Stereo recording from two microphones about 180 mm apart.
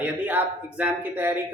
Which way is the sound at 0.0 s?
10° right (ahead or behind).